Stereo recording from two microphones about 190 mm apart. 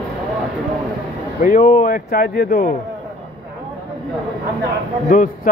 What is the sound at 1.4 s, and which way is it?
Speech, 45° left (ahead or behind).